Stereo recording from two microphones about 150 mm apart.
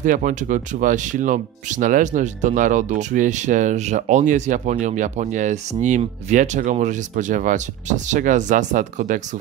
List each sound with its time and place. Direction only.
0.0 s speech: 60° right (ahead or behind)